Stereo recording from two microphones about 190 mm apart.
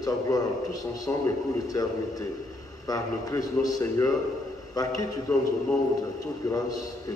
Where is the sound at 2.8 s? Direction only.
20° left (ahead or behind).